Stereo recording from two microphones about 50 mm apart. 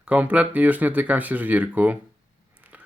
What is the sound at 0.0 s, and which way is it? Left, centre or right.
Speech, right.